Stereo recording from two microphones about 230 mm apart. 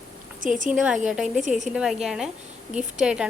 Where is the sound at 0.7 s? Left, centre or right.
Centre.